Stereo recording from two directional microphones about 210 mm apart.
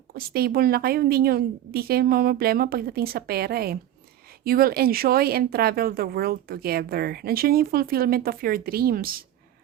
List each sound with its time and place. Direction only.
0.1 s speech: 45° right (ahead or behind)